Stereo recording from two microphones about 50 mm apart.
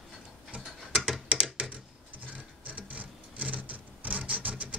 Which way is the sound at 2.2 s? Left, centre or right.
Right.